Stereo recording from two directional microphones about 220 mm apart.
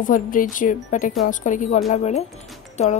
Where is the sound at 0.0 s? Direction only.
40° left (ahead or behind).